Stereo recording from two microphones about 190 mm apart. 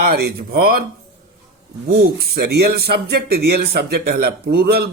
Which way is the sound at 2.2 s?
55° right (ahead or behind).